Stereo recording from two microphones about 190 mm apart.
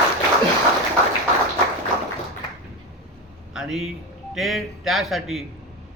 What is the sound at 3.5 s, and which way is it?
A man's voice, centre (ahead or behind).